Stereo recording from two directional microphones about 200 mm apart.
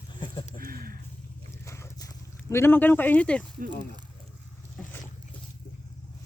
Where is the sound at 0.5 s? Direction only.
45° right (ahead or behind).